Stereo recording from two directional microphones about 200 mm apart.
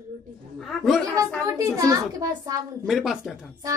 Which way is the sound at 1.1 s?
15° right (ahead or behind).